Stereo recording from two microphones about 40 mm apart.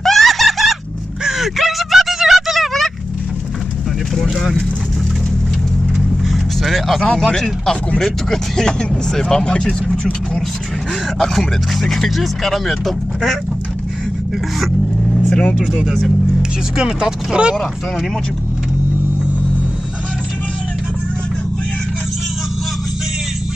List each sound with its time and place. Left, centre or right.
0.0 s a sound: centre
4.1 s vehicle: centre
6.2 s vehicle: centre
8.0 s speech: centre
11.1 s speech: centre
15.8 s speech: centre